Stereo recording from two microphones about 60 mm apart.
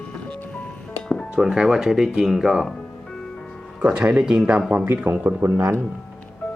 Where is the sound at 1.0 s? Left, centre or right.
Centre.